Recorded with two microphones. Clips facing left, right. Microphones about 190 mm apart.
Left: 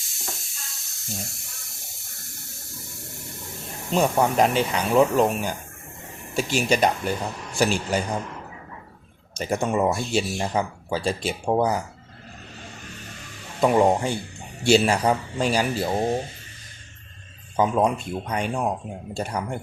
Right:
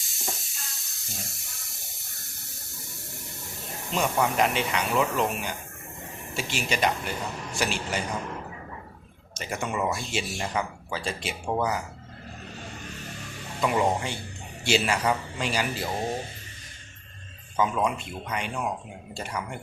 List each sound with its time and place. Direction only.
0.0 s water: centre (ahead or behind)
3.9 s speech: 40° left (ahead or behind)
9.4 s speech: 40° left (ahead or behind)
13.6 s speech: 40° left (ahead or behind)
17.6 s speech: 35° left (ahead or behind)